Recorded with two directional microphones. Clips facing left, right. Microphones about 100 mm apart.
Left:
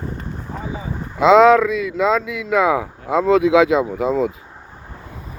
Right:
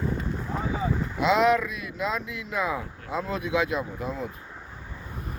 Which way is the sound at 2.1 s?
90° left.